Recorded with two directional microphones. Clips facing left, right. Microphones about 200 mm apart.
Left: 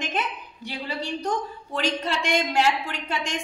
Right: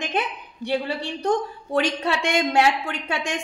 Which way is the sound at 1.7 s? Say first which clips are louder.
Right 4 dB; 60° right (ahead or behind).